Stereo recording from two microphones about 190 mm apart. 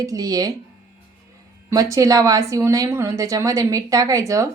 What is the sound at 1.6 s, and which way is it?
Speech, 15° right (ahead or behind).